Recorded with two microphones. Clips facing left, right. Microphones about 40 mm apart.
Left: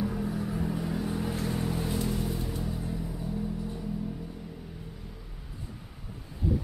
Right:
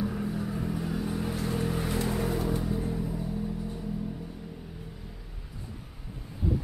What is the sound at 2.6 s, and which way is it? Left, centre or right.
Vehicle, centre.